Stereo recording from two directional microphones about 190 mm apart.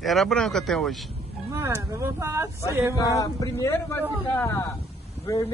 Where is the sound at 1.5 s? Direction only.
15° right (ahead or behind).